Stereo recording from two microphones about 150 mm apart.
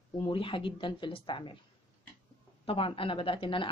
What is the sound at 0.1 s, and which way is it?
Speech, 35° left (ahead or behind).